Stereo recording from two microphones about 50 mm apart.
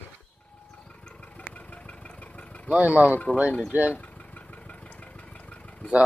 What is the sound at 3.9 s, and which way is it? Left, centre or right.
Vehicle, left.